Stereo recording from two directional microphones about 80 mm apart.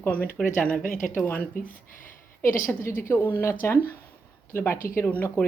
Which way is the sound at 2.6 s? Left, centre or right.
Left.